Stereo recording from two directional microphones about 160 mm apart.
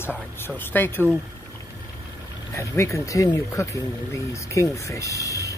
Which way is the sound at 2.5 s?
20° left (ahead or behind).